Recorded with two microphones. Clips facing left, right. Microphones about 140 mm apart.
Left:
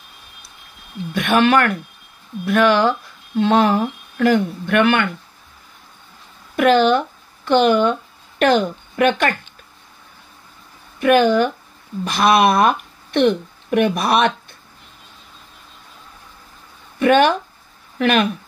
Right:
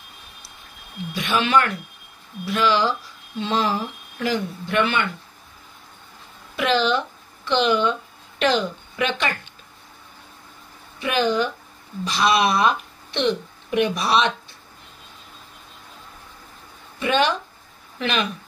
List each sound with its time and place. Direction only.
1.1 s speech: 55° left (ahead or behind)
6.5 s a woman's voice: 50° left (ahead or behind)
11.0 s speech: 55° left (ahead or behind)
17.0 s speech: 50° left (ahead or behind)